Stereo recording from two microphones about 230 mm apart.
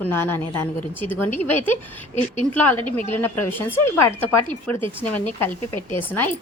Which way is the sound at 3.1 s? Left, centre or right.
Centre.